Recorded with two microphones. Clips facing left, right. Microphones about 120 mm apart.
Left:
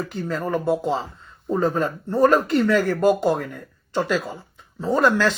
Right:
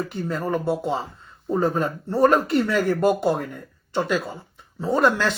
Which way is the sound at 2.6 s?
10° right (ahead or behind).